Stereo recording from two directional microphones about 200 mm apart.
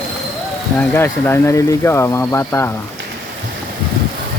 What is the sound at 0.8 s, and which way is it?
Speech, 10° left (ahead or behind).